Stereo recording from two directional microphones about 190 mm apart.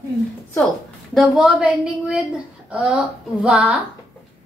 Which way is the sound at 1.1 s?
5° right (ahead or behind).